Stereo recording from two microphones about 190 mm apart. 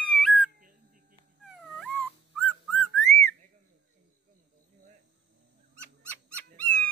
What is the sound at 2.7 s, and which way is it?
Whistling, 5° left (ahead or behind).